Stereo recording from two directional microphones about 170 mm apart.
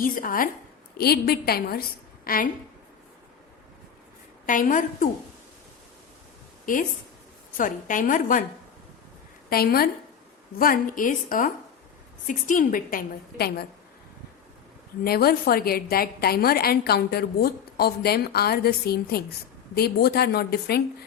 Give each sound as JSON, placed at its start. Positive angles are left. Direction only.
{"t": 0.0, "sound": "a woman's voice", "side_deg": 55}
{"t": 0.9, "sound": "a woman's voice", "side_deg": 70}
{"t": 4.4, "sound": "a woman's voice", "side_deg": 50}
{"t": 7.5, "sound": "a woman's voice", "side_deg": 50}
{"t": 9.5, "sound": "a woman's voice", "side_deg": 60}
{"t": 15.0, "sound": "a woman's voice", "side_deg": 65}